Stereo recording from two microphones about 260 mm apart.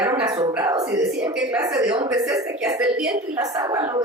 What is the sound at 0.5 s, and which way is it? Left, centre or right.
Speech, centre.